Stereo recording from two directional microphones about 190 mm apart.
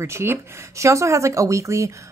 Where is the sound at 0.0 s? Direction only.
15° right (ahead or behind).